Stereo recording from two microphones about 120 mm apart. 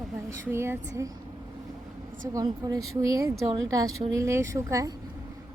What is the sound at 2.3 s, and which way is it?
Speech, 30° right (ahead or behind).